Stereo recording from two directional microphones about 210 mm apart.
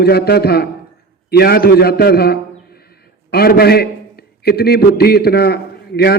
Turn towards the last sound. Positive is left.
turn(degrees=50)  # may be behind; listen again after turning